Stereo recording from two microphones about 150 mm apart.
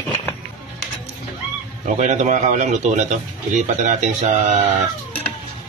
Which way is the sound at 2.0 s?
50° right (ahead or behind).